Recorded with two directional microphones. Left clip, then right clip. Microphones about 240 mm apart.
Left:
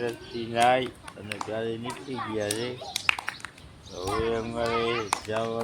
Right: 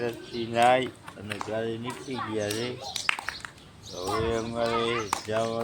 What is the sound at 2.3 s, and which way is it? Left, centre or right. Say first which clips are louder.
Speech: left 1 dB; centre.